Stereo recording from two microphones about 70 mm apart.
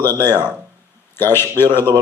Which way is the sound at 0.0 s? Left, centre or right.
Left.